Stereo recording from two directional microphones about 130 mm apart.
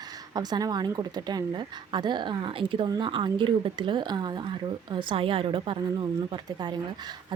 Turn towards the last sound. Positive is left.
turn(degrees=-40)  # may be behind; listen again after turning